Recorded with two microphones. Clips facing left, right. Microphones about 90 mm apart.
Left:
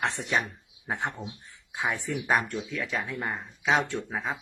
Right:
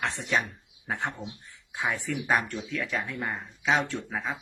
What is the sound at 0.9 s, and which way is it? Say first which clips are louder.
Speech: even; 15° left (ahead or behind).